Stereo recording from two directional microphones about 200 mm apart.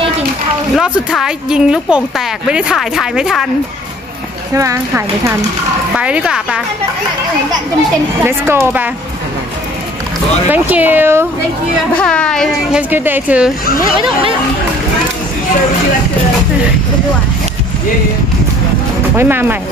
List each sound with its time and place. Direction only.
0.7 s a woman's voice: 5° right (ahead or behind)
4.6 s a woman's voice: 15° right (ahead or behind)
8.2 s speech: 10° right (ahead or behind)
10.5 s speech: 10° right (ahead or behind)
11.9 s a woman's voice: 5° left (ahead or behind)
12.9 s speech: 10° right (ahead or behind)
19.1 s speech: 10° right (ahead or behind)